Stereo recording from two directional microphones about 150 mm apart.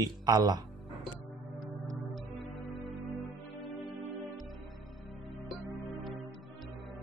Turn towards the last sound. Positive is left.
turn(degrees=0)  # may be behind; listen again after turning